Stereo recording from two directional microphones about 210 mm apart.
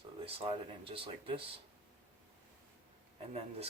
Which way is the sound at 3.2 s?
30° right (ahead or behind).